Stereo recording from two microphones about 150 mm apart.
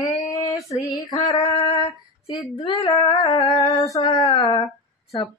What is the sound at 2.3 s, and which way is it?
Female singing, 30° left (ahead or behind).